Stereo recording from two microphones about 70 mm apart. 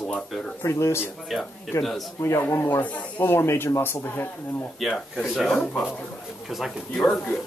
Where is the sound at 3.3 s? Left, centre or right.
Left.